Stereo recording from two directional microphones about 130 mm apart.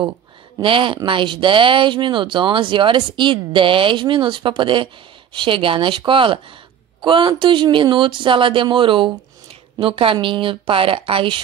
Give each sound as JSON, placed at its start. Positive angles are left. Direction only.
{"t": 0.6, "sound": "speech", "side_deg": -40}